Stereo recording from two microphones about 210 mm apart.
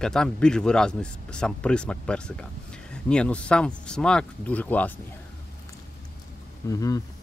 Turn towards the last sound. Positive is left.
turn(degrees=15)  # may be behind; listen again after turning